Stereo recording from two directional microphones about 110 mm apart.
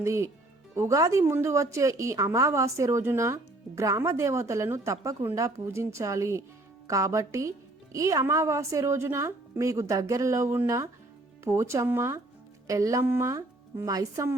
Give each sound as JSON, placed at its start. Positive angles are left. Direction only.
{"t": 0.0, "sound": "a woman's voice", "side_deg": -25}